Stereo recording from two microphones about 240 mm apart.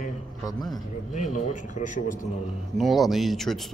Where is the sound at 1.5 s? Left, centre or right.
Left.